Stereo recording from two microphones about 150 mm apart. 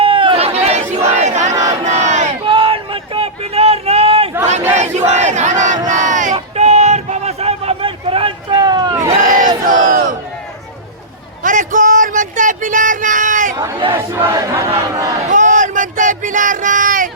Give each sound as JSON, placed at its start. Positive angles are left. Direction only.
{"t": 0.0, "sound": "chatter", "side_deg": -35}
{"t": 0.9, "sound": "battle cry", "side_deg": -20}
{"t": 1.2, "sound": "crowd", "side_deg": -50}
{"t": 1.8, "sound": "battle cry", "side_deg": -50}
{"t": 2.4, "sound": "a sound", "side_deg": -35}
{"t": 4.8, "sound": "battle cry", "side_deg": -50}
{"t": 6.3, "sound": "a sound", "side_deg": -45}
{"t": 9.2, "sound": "battle cry", "side_deg": -65}
{"t": 9.6, "sound": "crowd", "side_deg": -65}
{"t": 11.4, "sound": "a sound", "side_deg": -60}
{"t": 13.9, "sound": "battle cry", "side_deg": -15}
{"t": 15.3, "sound": "a sound", "side_deg": -55}